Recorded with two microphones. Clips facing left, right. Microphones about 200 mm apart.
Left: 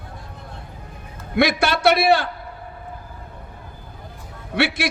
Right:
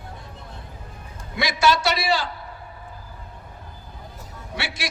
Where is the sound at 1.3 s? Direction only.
60° left (ahead or behind).